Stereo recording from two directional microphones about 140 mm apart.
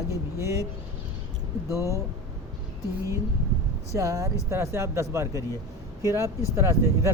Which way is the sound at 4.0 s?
20° right (ahead or behind).